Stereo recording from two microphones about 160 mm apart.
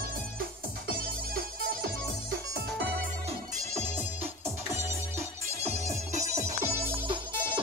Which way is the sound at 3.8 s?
40° right (ahead or behind).